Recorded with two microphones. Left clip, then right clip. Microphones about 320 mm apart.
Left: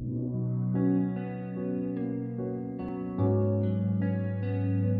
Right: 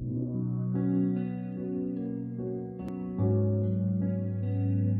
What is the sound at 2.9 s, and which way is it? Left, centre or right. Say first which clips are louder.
Music: left 2 dB; left.